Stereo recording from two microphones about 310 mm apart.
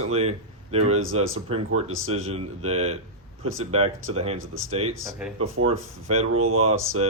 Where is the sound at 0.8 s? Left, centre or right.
Right.